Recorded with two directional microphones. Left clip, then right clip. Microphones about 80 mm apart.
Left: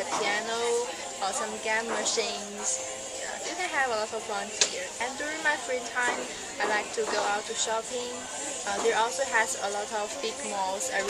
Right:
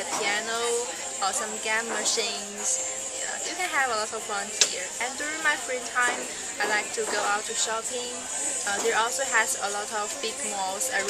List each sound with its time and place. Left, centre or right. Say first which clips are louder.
0.1 s a sound: right 2 dB; centre
1.2 s speech: right 2 dB; centre
3.5 s speech: right 2 dB; centre